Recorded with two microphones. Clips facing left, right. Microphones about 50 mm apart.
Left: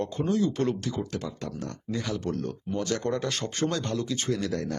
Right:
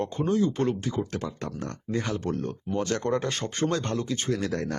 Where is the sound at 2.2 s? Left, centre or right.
Right.